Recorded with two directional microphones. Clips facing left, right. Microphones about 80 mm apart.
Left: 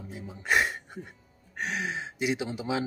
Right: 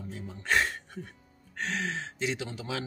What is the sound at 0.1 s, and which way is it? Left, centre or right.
Speech, centre.